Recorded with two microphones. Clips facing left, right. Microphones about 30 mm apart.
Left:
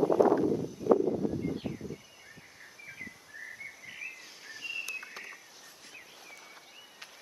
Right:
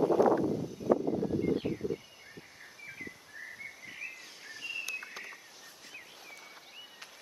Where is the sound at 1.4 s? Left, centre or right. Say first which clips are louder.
Right 4 dB; centre.